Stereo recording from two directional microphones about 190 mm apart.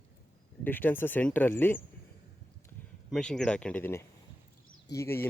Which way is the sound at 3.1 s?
5° left (ahead or behind).